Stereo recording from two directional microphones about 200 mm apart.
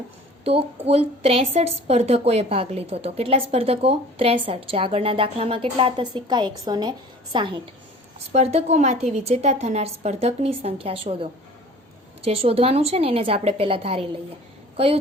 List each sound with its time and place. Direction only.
0.4 s a woman's voice: 30° right (ahead or behind)